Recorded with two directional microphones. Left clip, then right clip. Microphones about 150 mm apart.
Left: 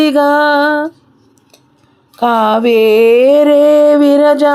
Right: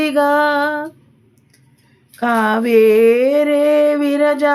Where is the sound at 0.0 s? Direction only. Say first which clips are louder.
Left 4 dB; 50° left (ahead or behind).